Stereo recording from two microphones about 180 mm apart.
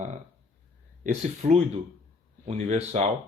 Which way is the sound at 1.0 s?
40° right (ahead or behind).